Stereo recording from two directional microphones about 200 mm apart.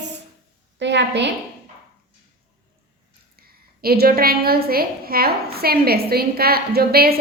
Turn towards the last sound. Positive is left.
turn(degrees=-50)  # may be behind; listen again after turning